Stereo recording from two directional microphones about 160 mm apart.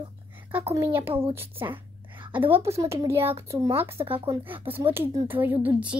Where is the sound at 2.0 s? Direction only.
30° right (ahead or behind).